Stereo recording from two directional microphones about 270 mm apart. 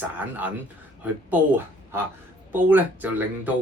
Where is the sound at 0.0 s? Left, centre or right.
Centre.